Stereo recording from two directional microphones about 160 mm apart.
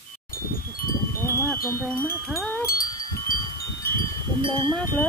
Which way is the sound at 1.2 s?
15° left (ahead or behind).